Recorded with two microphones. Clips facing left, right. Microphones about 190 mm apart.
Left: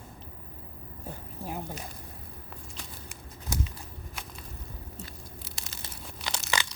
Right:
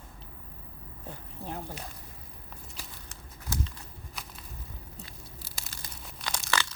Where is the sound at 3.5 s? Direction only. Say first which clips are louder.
Left 1 dB; 15° left (ahead or behind).